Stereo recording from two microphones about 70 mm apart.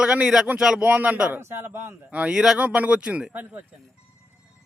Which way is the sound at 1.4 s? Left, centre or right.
Right.